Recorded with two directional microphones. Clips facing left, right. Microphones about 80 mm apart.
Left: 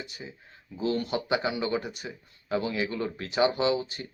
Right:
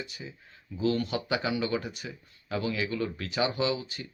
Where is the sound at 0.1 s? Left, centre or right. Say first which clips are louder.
Left 1 dB; left.